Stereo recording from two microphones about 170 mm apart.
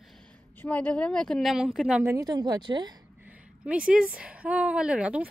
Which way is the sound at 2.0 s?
20° right (ahead or behind).